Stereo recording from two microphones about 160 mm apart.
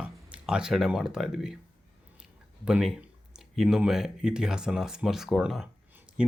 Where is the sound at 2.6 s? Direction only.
5° right (ahead or behind).